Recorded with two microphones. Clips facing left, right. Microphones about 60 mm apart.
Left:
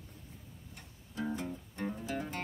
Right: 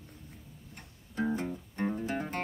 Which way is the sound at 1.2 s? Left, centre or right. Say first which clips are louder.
Right 5 dB; right.